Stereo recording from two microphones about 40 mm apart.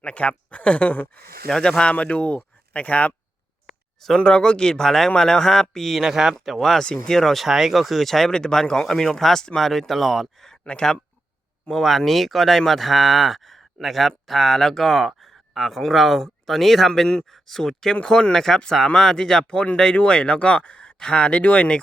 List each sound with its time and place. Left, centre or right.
0.0 s speech: left
1.5 s speech: centre
1.8 s speech: left
3.7 s a sound: centre
4.2 s speech: left; by 6.0 s centre
6.0 s speech: centre
6.4 s speech: centre
6.8 s speech: left
7.1 s speech: centre
7.4 s speech: centre
8.3 s speech: centre
10.6 s speech: left
11.7 s speech: centre; by 21.8 s left